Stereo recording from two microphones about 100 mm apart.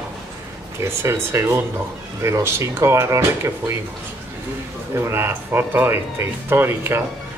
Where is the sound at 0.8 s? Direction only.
25° right (ahead or behind).